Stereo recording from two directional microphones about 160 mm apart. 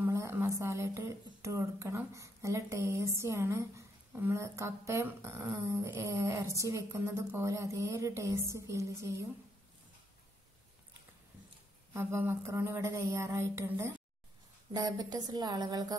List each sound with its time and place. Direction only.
0.0 s speech: 15° right (ahead or behind)
11.9 s speech: 15° right (ahead or behind)